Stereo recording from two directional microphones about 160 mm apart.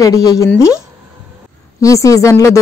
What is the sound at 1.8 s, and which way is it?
Speech, 20° left (ahead or behind).